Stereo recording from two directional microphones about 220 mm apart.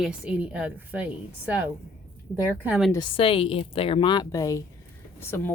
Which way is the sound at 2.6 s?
5° right (ahead or behind).